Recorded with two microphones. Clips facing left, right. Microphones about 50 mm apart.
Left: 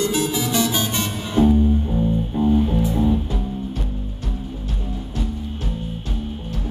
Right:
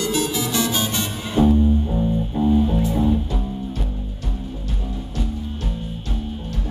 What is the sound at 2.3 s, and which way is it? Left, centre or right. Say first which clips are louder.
Music: even; centre.